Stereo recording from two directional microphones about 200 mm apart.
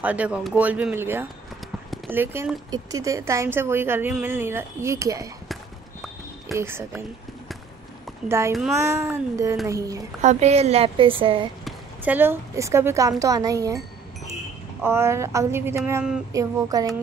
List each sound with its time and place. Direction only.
0.0 s a woman's voice: 5° right (ahead or behind)
2.7 s a woman's voice: 15° right (ahead or behind)
6.5 s a woman's voice: 10° right (ahead or behind)
8.3 s a woman's voice: 15° right (ahead or behind)
10.2 s a woman's voice: 35° right (ahead or behind)
11.6 s a woman's voice: 10° right (ahead or behind)
14.8 s a woman's voice: 10° right (ahead or behind)
16.3 s a woman's voice: 15° right (ahead or behind)